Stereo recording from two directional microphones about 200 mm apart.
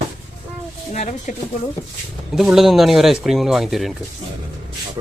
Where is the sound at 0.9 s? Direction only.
40° left (ahead or behind).